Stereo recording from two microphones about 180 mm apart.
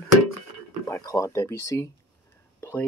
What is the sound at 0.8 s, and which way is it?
Speech, 20° left (ahead or behind).